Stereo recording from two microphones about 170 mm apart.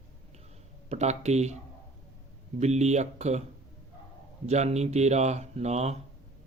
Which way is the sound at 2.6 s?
40° right (ahead or behind).